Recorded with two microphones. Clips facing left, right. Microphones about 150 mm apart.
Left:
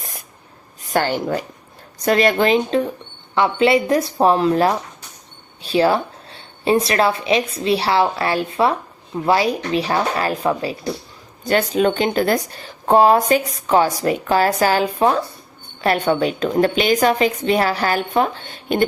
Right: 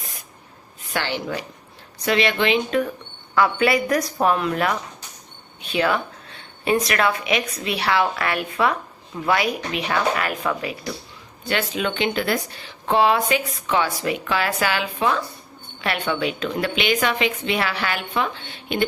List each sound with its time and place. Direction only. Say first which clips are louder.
0.9 s a woman's voice: left 7 dB; 45° left (ahead or behind)
2.6 s speech: left 3 dB; 30° left (ahead or behind)